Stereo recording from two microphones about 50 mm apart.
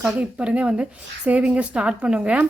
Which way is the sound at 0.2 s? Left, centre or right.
Right.